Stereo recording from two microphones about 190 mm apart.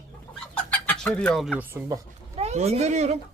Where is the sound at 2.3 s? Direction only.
35° right (ahead or behind).